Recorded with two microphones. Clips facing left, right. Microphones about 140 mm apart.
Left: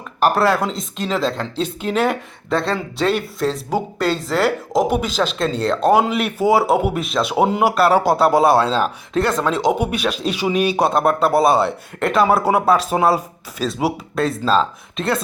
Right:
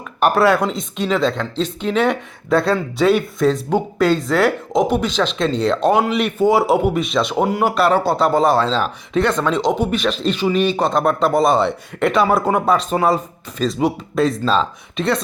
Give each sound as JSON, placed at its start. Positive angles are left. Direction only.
{"t": 0.2, "sound": "speech", "side_deg": 0}